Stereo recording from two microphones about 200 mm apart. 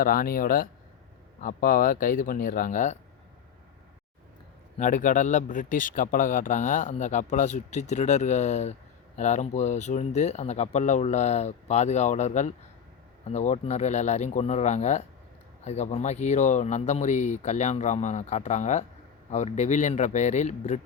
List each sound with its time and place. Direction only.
0.0 s speech: 45° left (ahead or behind)
4.8 s a man's voice: 40° left (ahead or behind)